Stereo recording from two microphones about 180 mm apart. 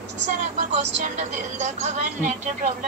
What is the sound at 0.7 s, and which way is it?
A woman's voice, 40° right (ahead or behind).